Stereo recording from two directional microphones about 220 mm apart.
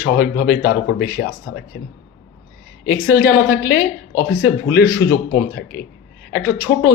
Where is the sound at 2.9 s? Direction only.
45° left (ahead or behind).